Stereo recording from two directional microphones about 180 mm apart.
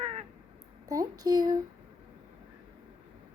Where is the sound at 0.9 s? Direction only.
20° right (ahead or behind).